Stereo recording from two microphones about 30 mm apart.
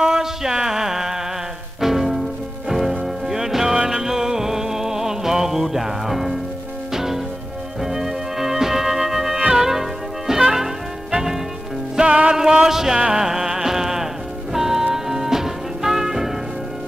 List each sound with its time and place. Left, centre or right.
0.0 s a sound: centre
1.8 s music: centre
12.1 s music: right
12.6 s music: centre